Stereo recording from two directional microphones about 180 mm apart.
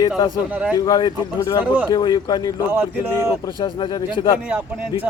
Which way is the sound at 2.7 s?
15° right (ahead or behind).